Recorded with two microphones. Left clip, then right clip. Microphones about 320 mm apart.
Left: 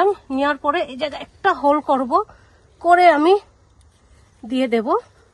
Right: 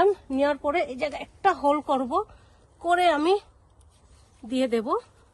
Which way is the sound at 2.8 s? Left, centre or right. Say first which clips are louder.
Left 9 dB; centre.